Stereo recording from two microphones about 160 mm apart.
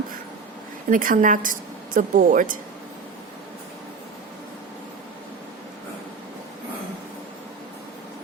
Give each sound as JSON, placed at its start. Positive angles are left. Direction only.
{"t": 0.9, "sound": "a woman's voice", "side_deg": -55}